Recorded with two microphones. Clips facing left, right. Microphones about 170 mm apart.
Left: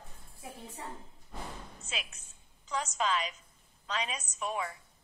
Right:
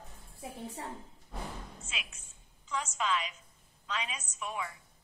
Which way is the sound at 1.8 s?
40° left (ahead or behind).